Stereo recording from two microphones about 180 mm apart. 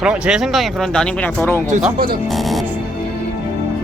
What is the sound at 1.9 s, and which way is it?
Speech, 55° right (ahead or behind).